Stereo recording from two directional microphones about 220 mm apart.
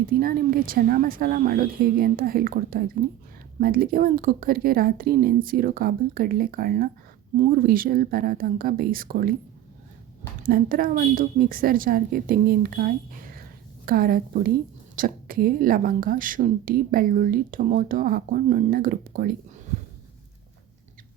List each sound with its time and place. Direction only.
0.1 s a woman's voice: 40° right (ahead or behind)
10.4 s a woman's voice: 40° right (ahead or behind)